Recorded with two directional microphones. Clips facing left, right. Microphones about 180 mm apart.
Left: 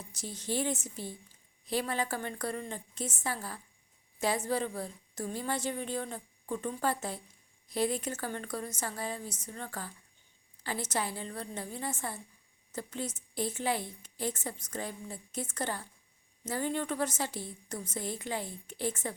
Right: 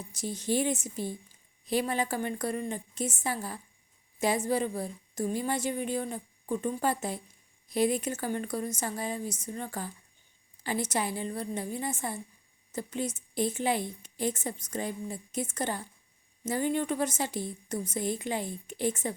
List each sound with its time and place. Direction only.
0.1 s a woman's voice: 15° right (ahead or behind)